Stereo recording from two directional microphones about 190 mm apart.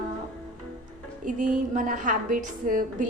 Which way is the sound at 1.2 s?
45° right (ahead or behind).